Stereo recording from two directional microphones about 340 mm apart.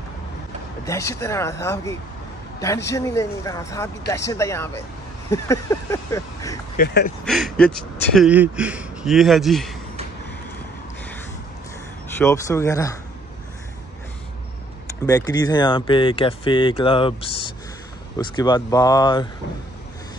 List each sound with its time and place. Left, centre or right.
0.8 s speech: centre
6.8 s speech: left
7.2 s speech: centre
12.2 s speech: centre
15.0 s speech: centre
18.1 s speech: centre